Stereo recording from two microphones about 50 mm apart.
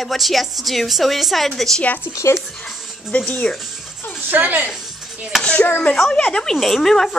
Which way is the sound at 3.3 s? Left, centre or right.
Left.